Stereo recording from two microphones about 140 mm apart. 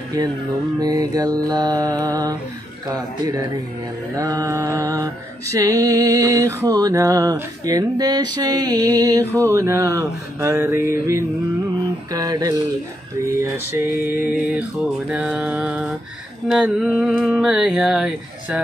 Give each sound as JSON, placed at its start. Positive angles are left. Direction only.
{"t": 0.7, "sound": "music", "side_deg": -25}
{"t": 14.2, "sound": "music", "side_deg": -10}
{"t": 16.4, "sound": "a sound", "side_deg": 0}